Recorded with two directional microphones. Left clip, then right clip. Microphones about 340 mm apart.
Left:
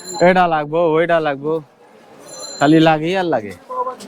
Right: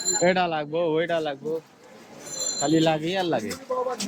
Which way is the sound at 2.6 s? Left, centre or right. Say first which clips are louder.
Left 10 dB; left.